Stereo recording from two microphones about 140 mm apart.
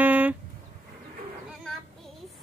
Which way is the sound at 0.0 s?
10° right (ahead or behind).